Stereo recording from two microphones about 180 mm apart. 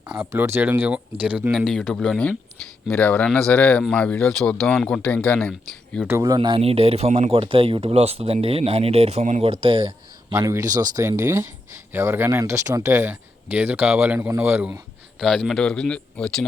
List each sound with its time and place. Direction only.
0.1 s speech: 10° right (ahead or behind)
6.1 s speech: 20° right (ahead or behind); by 9.5 s 40° right (ahead or behind)
9.5 s speech: 30° right (ahead or behind); by 14.8 s 10° right (ahead or behind)
15.2 s speech: centre (ahead or behind)